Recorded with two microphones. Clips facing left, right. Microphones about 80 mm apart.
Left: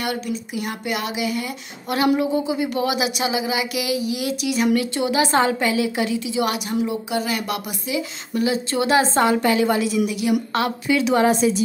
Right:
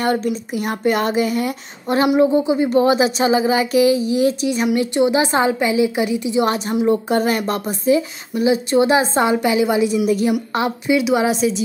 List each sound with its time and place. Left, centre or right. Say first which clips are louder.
0.0 s speech: right 6 dB; right
2.1 s a woman's voice: right 6 dB; right
7.1 s speech: right 6 dB; right
8.4 s a woman's voice: right 6 dB; right
10.0 s speech: right 6 dB; right
10.5 s a woman's voice: right 3 dB; centre
11.1 s a woman's voice: even; centre